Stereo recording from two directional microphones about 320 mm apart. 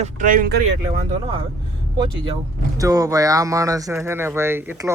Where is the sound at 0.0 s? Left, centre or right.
Right.